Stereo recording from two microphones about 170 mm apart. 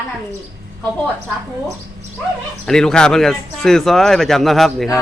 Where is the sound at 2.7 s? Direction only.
5° left (ahead or behind).